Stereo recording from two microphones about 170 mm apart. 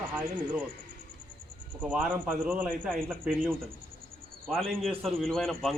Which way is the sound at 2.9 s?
5° left (ahead or behind).